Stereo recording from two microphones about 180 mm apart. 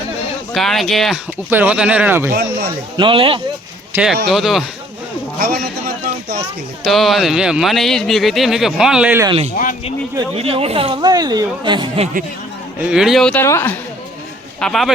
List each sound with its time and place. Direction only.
0.5 s speech: centre (ahead or behind)
1.5 s speech: 10° right (ahead or behind)
2.3 s speech: 60° right (ahead or behind)
3.0 s speech: 30° right (ahead or behind)
3.9 s speech: 5° right (ahead or behind)
5.4 s speech: 55° right (ahead or behind)
6.8 s speech: centre (ahead or behind)
10.3 s speech: 30° right (ahead or behind)
12.9 s speech: 5° right (ahead or behind); by 13.7 s 15° left (ahead or behind)
14.6 s speech: centre (ahead or behind)